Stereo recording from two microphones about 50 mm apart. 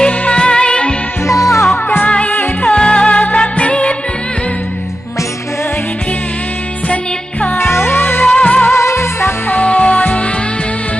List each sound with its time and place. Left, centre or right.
0.2 s music: centre
1.2 s music: left
2.0 s music: left
7.5 s music: left
8.6 s music: left
9.5 s music: left